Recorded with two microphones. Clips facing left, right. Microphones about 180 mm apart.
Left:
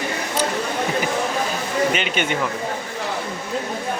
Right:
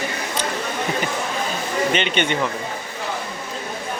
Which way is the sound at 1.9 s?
5° left (ahead or behind).